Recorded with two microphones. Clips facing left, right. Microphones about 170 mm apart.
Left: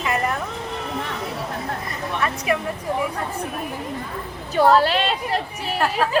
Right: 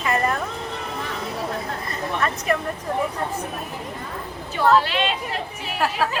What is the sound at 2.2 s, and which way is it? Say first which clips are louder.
Speech: left 1 dB; 10° left (ahead or behind).